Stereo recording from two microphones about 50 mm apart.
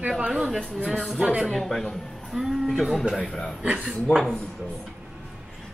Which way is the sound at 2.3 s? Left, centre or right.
Centre.